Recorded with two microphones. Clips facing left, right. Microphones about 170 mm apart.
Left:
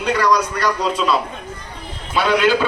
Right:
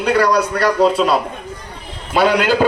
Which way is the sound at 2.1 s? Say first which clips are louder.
Right 2 dB; 45° right (ahead or behind).